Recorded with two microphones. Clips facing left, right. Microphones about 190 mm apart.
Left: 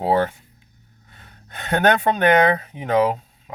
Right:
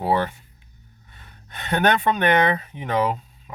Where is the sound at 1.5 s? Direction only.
50° left (ahead or behind).